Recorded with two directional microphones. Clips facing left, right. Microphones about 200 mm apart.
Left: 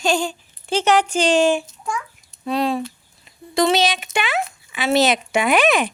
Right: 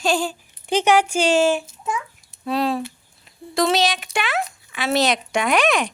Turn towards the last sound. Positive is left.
turn(degrees=5)  # may be behind; listen again after turning